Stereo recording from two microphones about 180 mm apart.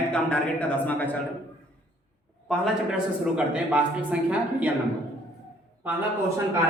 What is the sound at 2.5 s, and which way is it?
A man's voice, 5° right (ahead or behind).